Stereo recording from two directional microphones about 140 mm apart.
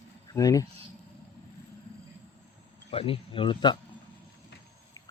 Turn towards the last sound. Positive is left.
turn(degrees=35)  # may be behind; listen again after turning